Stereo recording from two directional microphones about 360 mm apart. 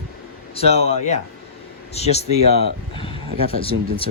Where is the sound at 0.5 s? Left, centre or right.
Centre.